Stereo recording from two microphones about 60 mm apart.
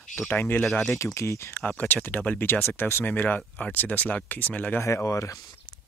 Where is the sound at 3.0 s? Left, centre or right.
Left.